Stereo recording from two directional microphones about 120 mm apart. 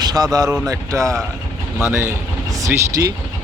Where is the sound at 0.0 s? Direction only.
35° right (ahead or behind).